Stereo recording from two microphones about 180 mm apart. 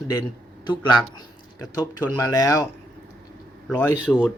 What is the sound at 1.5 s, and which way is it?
Speech, 20° left (ahead or behind).